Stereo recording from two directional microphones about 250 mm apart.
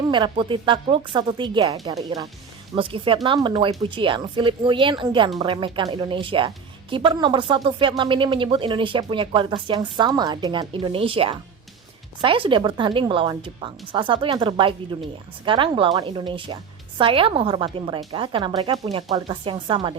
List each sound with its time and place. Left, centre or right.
0.1 s speech: centre